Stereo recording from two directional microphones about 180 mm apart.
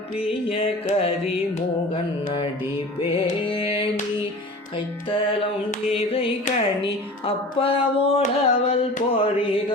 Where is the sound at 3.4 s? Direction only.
30° left (ahead or behind).